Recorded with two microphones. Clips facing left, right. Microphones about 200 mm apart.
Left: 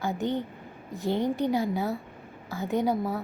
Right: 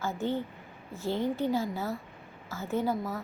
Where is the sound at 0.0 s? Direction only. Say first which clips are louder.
Left 2 dB; 15° left (ahead or behind).